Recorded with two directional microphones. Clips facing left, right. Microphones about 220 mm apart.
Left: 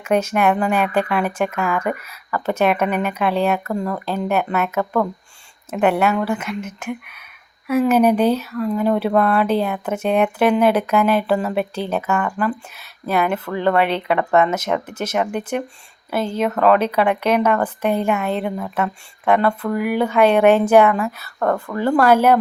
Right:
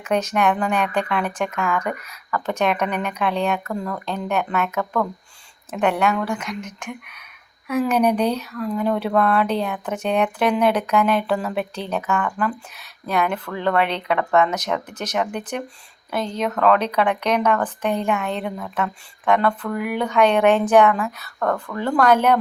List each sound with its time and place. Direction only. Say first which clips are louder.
0.0 s speech: left 3 dB; 5° left (ahead or behind)
3.7 s speech: left 4 dB; 15° left (ahead or behind)
4.0 s speech: left 3 dB; 5° left (ahead or behind)
21.3 s speech: left 3 dB; 15° left (ahead or behind)
21.8 s speech: left 3 dB; 5° left (ahead or behind)